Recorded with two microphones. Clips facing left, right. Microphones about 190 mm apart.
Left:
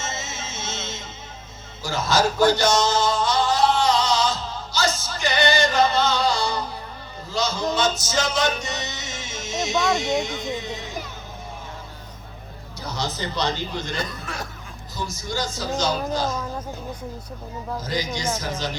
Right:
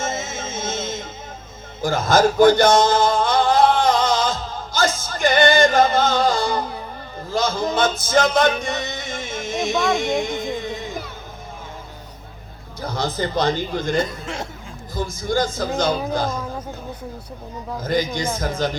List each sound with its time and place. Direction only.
0.0 s music: 50° right (ahead or behind)
1.8 s a sound: 50° right (ahead or behind)
7.3 s music: 50° right (ahead or behind)
9.7 s speech: centre (ahead or behind)
10.0 s music: 50° right (ahead or behind)
12.8 s a man's voice: 50° right (ahead or behind)
14.1 s speech: 25° right (ahead or behind)
14.9 s a man's voice: 55° right (ahead or behind)
17.8 s a man's voice: 55° right (ahead or behind)